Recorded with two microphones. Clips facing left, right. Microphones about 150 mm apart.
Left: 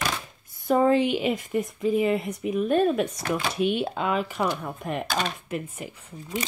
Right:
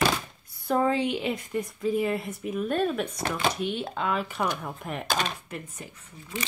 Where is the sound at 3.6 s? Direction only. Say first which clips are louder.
Left 6 dB; 65° left (ahead or behind).